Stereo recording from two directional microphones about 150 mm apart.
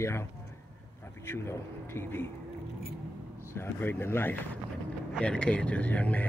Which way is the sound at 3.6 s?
15° left (ahead or behind).